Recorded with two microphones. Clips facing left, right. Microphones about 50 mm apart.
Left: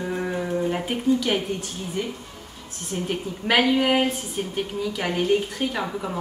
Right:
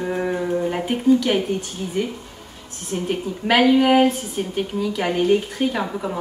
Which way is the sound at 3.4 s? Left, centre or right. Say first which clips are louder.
Right 4 dB; centre.